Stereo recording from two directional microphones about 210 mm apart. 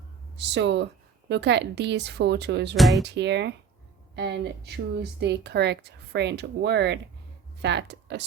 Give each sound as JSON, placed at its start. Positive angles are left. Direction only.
{"t": 0.3, "sound": "speech", "side_deg": -55}
{"t": 2.7, "sound": "speech", "side_deg": 0}
{"t": 3.0, "sound": "speech", "side_deg": -55}